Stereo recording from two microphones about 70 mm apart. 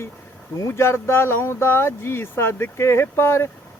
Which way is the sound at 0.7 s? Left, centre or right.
Left.